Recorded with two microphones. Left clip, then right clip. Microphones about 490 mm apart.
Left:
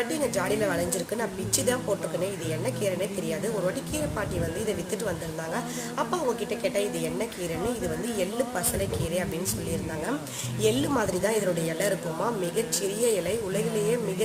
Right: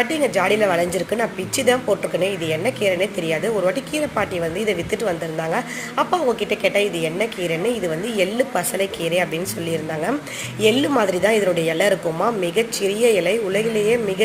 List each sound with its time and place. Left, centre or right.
0.1 s a woman's voice: left
10.6 s a woman's voice: left